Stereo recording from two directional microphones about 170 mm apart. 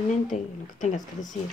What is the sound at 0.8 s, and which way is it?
Speech, 45° left (ahead or behind).